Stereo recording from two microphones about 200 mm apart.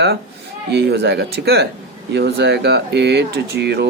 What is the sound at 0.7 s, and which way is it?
Speech, 55° right (ahead or behind).